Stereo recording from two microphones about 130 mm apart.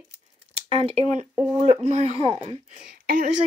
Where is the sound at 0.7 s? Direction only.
50° right (ahead or behind).